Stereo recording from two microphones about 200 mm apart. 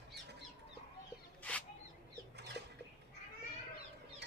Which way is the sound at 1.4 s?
5° left (ahead or behind).